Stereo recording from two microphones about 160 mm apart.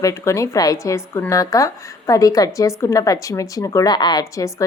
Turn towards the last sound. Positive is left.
turn(degrees=25)  # may be behind; listen again after turning